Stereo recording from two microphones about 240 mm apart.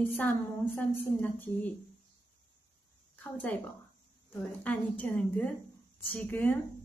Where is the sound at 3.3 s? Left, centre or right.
Centre.